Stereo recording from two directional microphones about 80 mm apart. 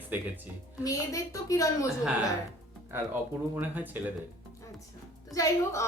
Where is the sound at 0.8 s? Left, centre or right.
Left.